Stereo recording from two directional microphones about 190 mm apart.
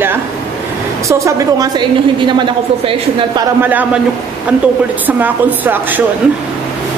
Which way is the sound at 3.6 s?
10° right (ahead or behind).